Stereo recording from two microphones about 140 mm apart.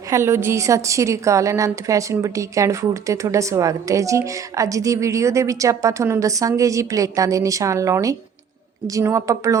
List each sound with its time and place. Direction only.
0.1 s a woman's voice: 20° right (ahead or behind)